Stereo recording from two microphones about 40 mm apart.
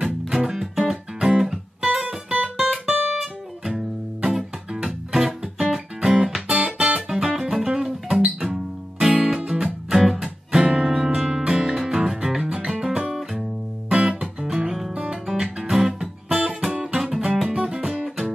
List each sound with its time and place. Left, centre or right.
0.0 s music: centre
2.5 s music: centre
2.9 s music: right
3.2 s music: centre
10.6 s music: right
11.1 s music: centre